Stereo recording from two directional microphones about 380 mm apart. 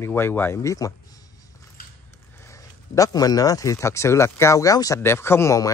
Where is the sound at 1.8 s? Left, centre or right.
Left.